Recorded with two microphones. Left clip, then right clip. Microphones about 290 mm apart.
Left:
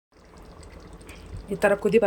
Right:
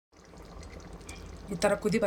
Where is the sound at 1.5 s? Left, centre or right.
Centre.